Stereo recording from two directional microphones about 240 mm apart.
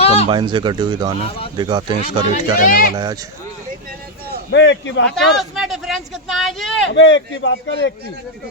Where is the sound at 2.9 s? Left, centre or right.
Centre.